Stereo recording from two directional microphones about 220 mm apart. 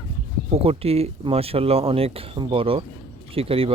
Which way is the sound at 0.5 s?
25° right (ahead or behind).